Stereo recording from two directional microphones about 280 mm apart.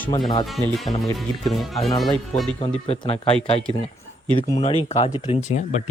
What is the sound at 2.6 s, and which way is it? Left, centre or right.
Speech, left.